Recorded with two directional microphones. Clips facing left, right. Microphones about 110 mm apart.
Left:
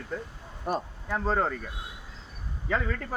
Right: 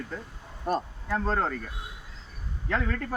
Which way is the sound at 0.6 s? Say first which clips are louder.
Right 2 dB; 5° left (ahead or behind).